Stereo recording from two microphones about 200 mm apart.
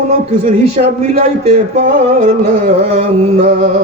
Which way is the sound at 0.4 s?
35° right (ahead or behind).